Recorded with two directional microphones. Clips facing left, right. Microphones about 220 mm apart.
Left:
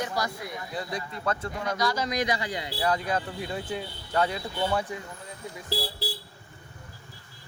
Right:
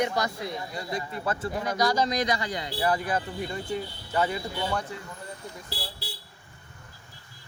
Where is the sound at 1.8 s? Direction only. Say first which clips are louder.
Right 4 dB; 40° right (ahead or behind).